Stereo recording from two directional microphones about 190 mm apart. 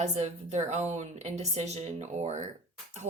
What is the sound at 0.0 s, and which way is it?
Speech, 40° right (ahead or behind).